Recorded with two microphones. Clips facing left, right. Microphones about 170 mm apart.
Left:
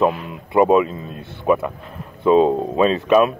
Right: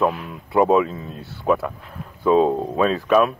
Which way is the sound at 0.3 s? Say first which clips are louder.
Left 2 dB; 10° left (ahead or behind).